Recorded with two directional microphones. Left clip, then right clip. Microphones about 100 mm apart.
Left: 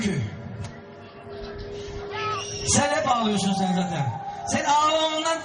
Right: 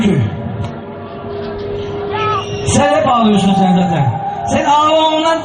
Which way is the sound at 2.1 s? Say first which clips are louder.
Right 12 dB; 55° left (ahead or behind).